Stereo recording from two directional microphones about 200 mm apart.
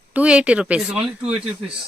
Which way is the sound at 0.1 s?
5° right (ahead or behind).